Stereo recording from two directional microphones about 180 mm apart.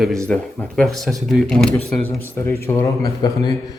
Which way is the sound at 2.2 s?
15° left (ahead or behind).